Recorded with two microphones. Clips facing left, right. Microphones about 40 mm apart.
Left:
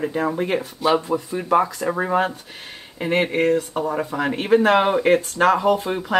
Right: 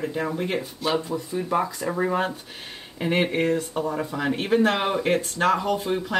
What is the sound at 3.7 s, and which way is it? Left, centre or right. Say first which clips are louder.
Speech: left 3 dB; centre.